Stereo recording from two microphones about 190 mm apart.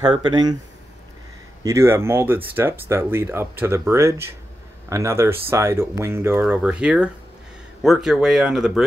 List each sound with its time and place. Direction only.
0.1 s speech: 25° right (ahead or behind)
1.6 s speech: 15° right (ahead or behind)